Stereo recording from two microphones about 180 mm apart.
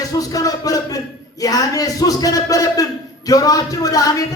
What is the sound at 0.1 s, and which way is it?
A man's voice, 20° left (ahead or behind).